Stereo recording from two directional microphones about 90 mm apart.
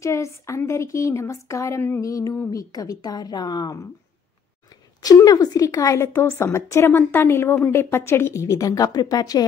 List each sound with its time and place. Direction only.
0.0 s a woman's voice: 35° left (ahead or behind)
5.0 s a woman's voice: 45° left (ahead or behind)